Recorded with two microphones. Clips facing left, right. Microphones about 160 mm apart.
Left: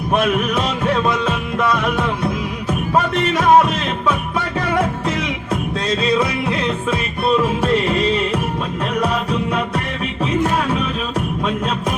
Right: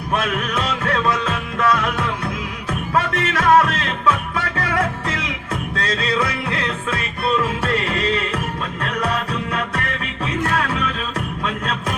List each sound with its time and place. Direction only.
0.1 s music: 20° left (ahead or behind)